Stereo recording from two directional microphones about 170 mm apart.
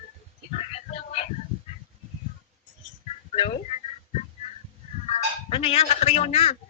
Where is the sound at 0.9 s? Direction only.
40° left (ahead or behind).